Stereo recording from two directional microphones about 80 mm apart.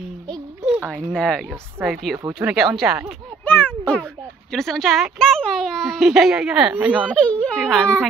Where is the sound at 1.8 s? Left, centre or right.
Right.